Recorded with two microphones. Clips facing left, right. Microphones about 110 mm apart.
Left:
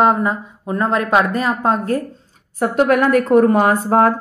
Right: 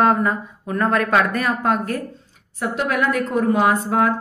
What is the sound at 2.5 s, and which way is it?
A woman's voice, 50° left (ahead or behind).